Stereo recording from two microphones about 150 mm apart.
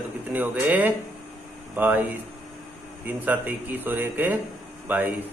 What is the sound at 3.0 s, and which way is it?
A man's voice, 10° right (ahead or behind).